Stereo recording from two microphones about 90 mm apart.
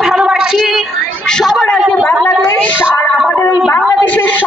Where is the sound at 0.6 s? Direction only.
Centre (ahead or behind).